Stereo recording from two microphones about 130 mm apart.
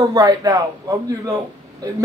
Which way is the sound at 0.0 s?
25° right (ahead or behind).